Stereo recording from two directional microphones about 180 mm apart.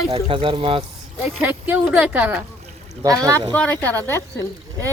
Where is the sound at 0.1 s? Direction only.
30° right (ahead or behind).